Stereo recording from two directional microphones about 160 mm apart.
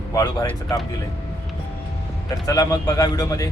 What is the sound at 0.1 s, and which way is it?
Speech, 20° left (ahead or behind).